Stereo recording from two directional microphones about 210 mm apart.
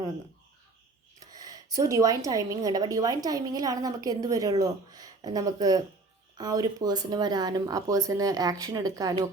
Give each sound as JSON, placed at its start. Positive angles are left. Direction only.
{"t": 1.2, "sound": "a woman's voice", "side_deg": -20}